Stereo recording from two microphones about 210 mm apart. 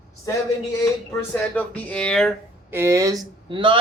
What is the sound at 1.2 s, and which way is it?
Speech, 5° left (ahead or behind).